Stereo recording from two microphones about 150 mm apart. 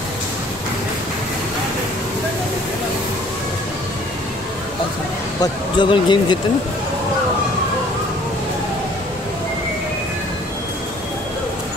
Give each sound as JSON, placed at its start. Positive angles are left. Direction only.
{"t": 5.4, "sound": "speech", "side_deg": 30}